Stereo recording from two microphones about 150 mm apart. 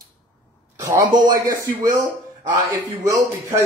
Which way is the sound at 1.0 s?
30° right (ahead or behind).